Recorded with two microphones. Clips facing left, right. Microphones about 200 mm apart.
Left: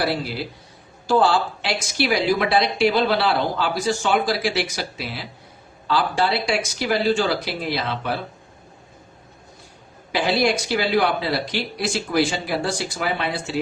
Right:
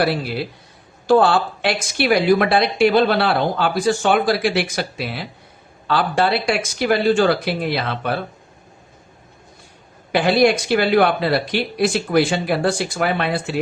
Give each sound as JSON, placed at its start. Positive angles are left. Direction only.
{"t": 0.0, "sound": "a woman's voice", "side_deg": -60}
{"t": 10.1, "sound": "a woman's voice", "side_deg": -55}